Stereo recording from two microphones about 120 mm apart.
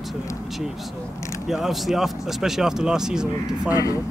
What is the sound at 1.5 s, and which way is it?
Speech, centre (ahead or behind).